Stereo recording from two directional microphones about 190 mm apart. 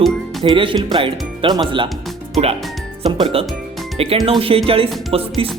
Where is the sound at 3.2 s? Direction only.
30° right (ahead or behind).